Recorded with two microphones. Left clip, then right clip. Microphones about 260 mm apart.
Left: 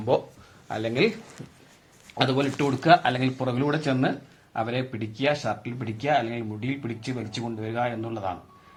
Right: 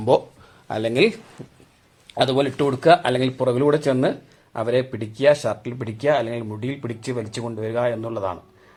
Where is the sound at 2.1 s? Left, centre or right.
Right.